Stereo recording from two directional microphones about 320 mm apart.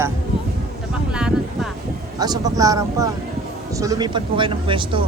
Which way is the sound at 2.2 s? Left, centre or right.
Centre.